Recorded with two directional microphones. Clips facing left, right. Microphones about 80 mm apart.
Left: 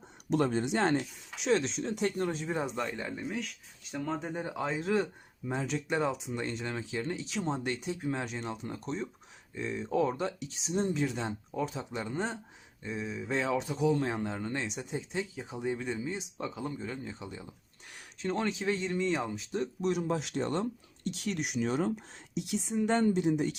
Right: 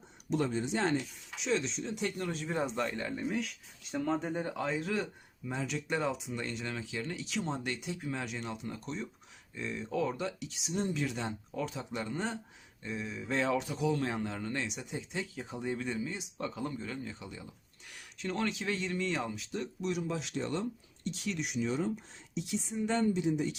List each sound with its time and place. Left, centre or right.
0.3 s speech: left
2.5 s speech: centre
3.2 s speech: centre
4.5 s speech: left
13.6 s speech: left
15.4 s speech: centre
19.8 s speech: left
21.0 s speech: left
23.0 s speech: left